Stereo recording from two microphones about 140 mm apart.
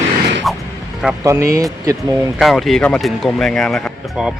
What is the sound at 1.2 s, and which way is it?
Speech, 20° right (ahead or behind).